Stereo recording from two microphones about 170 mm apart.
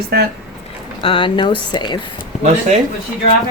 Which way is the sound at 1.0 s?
30° left (ahead or behind).